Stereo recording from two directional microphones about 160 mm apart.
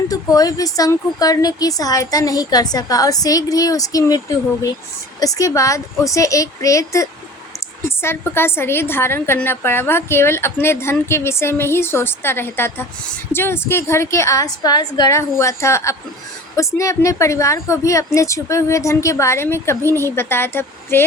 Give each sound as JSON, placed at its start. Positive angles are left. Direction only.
{"t": 0.1, "sound": "a woman's voice", "side_deg": 20}